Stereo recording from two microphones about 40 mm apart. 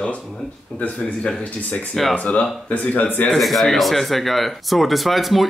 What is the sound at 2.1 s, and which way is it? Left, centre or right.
Speech, left.